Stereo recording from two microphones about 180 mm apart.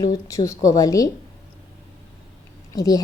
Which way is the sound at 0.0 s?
20° left (ahead or behind).